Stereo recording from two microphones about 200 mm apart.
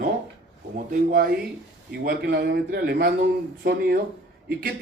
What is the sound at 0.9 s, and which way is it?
Speech, 45° right (ahead or behind).